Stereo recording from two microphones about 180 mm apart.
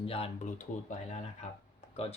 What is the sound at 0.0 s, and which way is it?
Speech, 30° left (ahead or behind).